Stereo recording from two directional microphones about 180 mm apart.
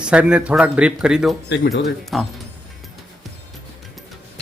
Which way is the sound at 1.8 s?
Centre (ahead or behind).